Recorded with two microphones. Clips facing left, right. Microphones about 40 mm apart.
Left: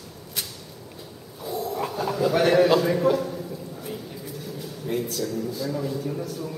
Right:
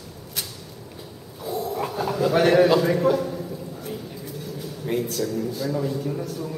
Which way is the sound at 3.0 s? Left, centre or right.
Centre.